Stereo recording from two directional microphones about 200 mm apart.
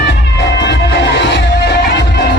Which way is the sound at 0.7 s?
60° left (ahead or behind).